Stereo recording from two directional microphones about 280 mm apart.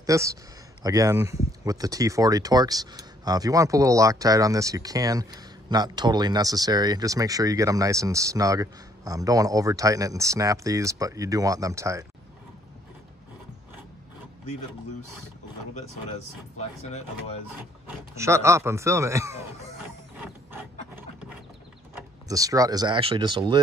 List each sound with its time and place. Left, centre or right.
0.0 s speech: centre
15.7 s speech: left
17.8 s speech: centre
22.3 s speech: centre